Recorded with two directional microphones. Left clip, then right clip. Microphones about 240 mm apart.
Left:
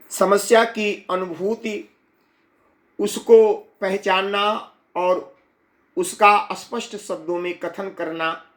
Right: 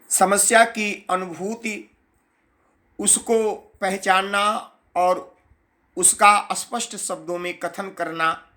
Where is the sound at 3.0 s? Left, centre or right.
Centre.